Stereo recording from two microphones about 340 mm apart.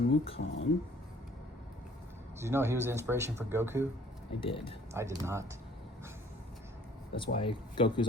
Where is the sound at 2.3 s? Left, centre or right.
Centre.